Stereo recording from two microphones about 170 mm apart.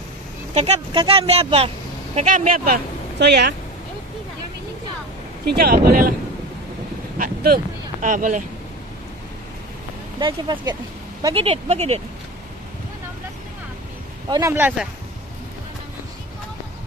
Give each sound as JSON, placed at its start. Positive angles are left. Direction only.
{"t": 0.6, "sound": "speech", "side_deg": -35}
{"t": 2.1, "sound": "speech", "side_deg": -50}
{"t": 5.4, "sound": "speech", "side_deg": -65}
{"t": 7.2, "sound": "speech", "side_deg": -60}
{"t": 10.1, "sound": "speech", "side_deg": -25}
{"t": 14.3, "sound": "speech", "side_deg": -15}